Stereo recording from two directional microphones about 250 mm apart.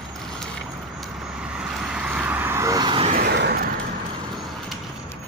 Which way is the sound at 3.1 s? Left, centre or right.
Right.